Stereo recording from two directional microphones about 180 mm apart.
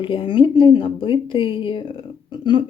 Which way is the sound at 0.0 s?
30° left (ahead or behind).